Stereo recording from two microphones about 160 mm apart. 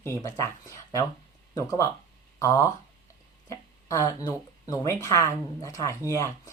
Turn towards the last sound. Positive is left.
turn(degrees=20)  # may be behind; listen again after turning